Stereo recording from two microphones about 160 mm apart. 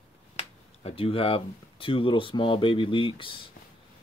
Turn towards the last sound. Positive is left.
turn(degrees=30)  # may be behind; listen again after turning